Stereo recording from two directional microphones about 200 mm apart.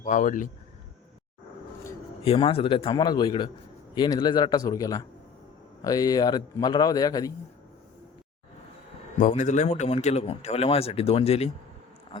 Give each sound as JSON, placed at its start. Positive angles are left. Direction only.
{"t": 0.0, "sound": "a man's voice", "side_deg": 40}
{"t": 2.2, "sound": "a man's voice", "side_deg": 30}
{"t": 9.1, "sound": "a man's voice", "side_deg": 40}